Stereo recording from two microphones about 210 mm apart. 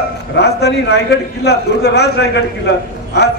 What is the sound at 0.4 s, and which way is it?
A man's voice, 55° left (ahead or behind).